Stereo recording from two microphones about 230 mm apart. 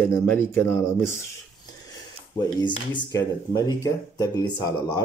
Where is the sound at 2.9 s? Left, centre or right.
Centre.